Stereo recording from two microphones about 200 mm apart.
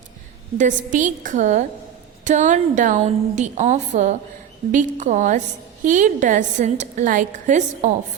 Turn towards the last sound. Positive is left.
turn(degrees=-40)  # may be behind; listen again after turning